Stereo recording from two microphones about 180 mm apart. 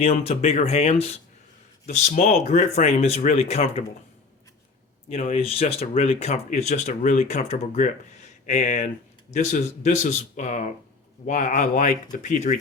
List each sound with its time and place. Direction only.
0.0 s speech: 35° left (ahead or behind)
5.0 s a man's voice: 35° left (ahead or behind)